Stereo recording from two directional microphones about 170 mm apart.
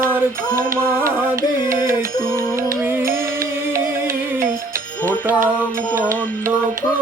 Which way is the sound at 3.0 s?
55° right (ahead or behind).